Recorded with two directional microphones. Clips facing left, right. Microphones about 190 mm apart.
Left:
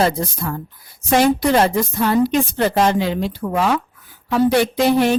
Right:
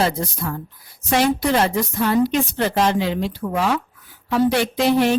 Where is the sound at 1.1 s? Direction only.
45° left (ahead or behind).